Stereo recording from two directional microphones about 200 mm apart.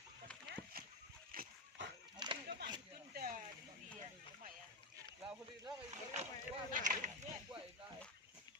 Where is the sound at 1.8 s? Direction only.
65° right (ahead or behind).